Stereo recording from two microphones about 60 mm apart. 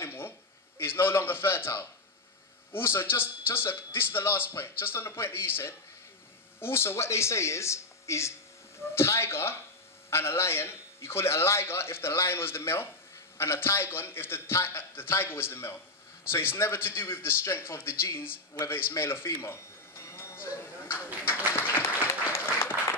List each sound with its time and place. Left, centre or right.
0.0 s a sound: left
0.7 s a man's voice: left
20.0 s a sound: left
20.4 s speech: left
21.0 s speech: right
21.7 s applause: left